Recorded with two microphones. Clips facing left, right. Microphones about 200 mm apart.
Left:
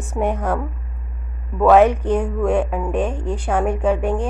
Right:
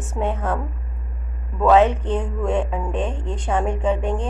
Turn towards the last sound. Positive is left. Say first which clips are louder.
# left 3 dB
turn(degrees=10)  # may be behind; listen again after turning